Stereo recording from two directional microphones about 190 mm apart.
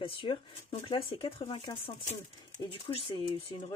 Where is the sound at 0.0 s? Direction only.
30° left (ahead or behind).